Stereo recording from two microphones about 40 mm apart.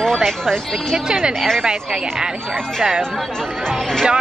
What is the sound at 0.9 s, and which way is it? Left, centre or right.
Speech, centre.